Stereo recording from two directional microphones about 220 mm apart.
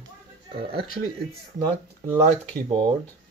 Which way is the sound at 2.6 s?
20° right (ahead or behind).